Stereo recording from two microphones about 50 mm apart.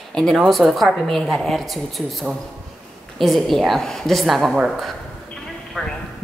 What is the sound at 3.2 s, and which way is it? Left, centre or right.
Speech, centre.